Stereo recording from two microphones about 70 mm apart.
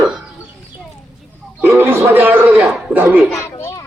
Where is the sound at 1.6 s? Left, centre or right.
Right.